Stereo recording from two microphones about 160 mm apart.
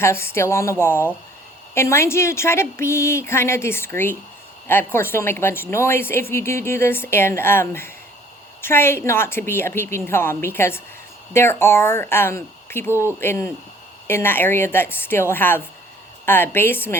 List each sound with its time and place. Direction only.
0.0 s a woman's voice: 15° left (ahead or behind)